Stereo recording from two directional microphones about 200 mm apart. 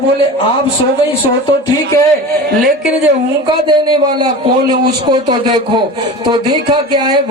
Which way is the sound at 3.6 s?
20° right (ahead or behind).